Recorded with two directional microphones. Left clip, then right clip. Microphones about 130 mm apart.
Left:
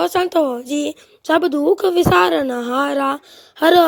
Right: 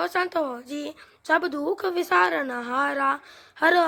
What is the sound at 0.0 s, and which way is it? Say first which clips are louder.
Speech: left 8 dB; 50° left (ahead or behind).